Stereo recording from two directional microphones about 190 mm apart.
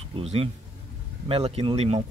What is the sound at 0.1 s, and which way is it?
Speech, 30° right (ahead or behind).